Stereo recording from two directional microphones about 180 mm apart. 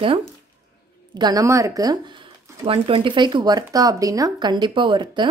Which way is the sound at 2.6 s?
30° right (ahead or behind).